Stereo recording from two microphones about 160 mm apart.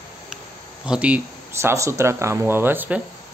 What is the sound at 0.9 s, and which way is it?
Speech, 5° right (ahead or behind).